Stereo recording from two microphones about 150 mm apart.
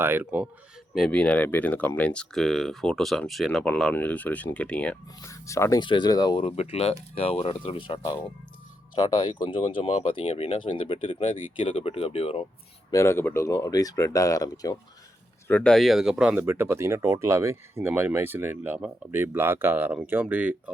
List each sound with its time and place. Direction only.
0.0 s speech: 15° right (ahead or behind)
0.9 s speech: 5° left (ahead or behind)
5.2 s speech: 20° left (ahead or behind)
5.8 s speech: 30° left (ahead or behind)
12.9 s speech: 20° left (ahead or behind)
15.4 s speech: 5° left (ahead or behind); by 20.7 s 10° right (ahead or behind)